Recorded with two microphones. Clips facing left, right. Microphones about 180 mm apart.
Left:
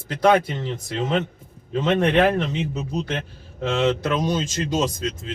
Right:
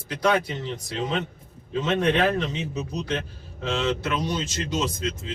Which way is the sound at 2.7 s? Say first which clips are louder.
Left 2 dB; 55° left (ahead or behind).